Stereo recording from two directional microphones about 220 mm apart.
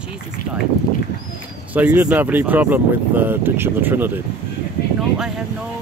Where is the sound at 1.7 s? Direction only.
5° right (ahead or behind).